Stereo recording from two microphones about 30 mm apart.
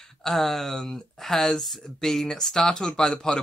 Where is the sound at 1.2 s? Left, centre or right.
Centre.